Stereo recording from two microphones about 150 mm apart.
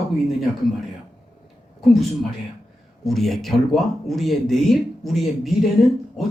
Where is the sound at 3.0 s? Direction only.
Centre (ahead or behind).